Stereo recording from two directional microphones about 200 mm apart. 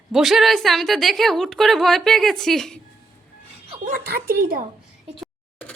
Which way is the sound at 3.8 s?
45° right (ahead or behind).